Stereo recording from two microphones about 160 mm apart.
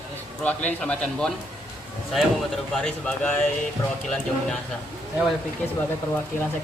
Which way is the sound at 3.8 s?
20° left (ahead or behind).